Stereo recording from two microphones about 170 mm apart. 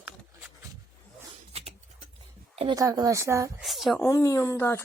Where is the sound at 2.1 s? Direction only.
35° right (ahead or behind).